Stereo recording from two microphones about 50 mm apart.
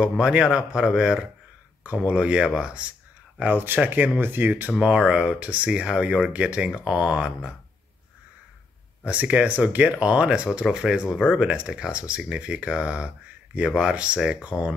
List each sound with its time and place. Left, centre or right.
0.0 s speech: centre
1.8 s speech: right
2.1 s speech: centre
3.4 s speech: right
4.7 s speech: centre
9.0 s speech: right